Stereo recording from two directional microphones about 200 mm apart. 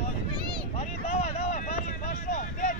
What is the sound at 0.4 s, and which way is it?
Vehicle, 20° right (ahead or behind).